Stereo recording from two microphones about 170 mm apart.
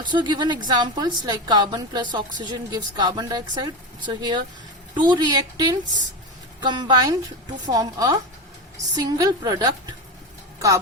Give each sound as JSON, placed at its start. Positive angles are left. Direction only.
{"t": 0.0, "sound": "a woman's voice", "side_deg": -25}